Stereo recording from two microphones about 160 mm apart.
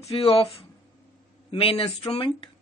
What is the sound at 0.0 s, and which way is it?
Speech, 35° left (ahead or behind).